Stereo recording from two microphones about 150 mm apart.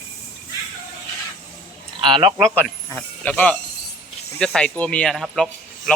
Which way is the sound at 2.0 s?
35° right (ahead or behind).